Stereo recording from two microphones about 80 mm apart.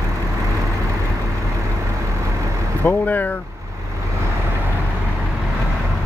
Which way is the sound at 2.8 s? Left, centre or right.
Left.